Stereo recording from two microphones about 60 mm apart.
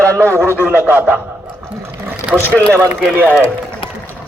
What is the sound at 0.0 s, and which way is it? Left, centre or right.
Speech, right.